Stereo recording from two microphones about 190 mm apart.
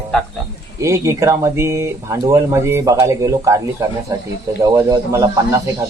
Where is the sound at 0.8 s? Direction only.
15° right (ahead or behind).